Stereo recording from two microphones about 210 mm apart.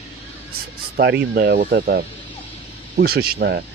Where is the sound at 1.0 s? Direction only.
55° right (ahead or behind).